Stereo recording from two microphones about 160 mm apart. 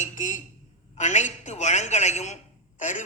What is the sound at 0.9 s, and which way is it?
A woman's voice, 45° left (ahead or behind).